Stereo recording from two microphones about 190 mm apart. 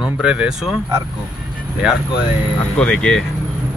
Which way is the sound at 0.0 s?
5° right (ahead or behind).